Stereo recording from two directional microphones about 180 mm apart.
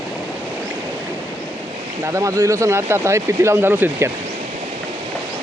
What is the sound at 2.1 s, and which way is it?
Speech, 15° right (ahead or behind).